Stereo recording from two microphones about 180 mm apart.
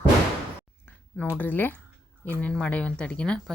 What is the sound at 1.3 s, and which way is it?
Speech, 10° left (ahead or behind).